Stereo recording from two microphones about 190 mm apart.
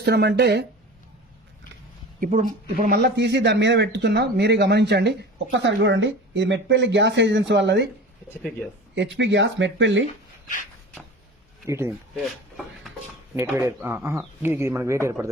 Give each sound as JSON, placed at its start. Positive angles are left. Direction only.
{"t": 0.0, "sound": "speech", "side_deg": -60}
{"t": 2.2, "sound": "a man's voice", "side_deg": -45}
{"t": 9.0, "sound": "a man's voice", "side_deg": -75}
{"t": 11.6, "sound": "speech", "side_deg": -15}
{"t": 12.1, "sound": "speech", "side_deg": 0}
{"t": 13.3, "sound": "speech", "side_deg": -10}